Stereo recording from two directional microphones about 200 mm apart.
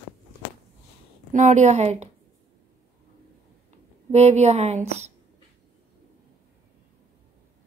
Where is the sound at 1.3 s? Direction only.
35° right (ahead or behind).